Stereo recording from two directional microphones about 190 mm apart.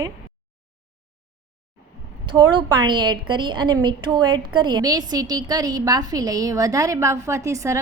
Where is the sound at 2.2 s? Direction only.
25° right (ahead or behind).